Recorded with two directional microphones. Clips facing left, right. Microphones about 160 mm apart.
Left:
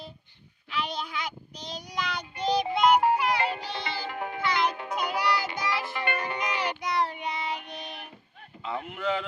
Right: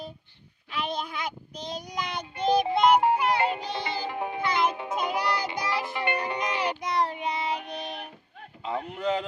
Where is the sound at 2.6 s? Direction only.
25° right (ahead or behind).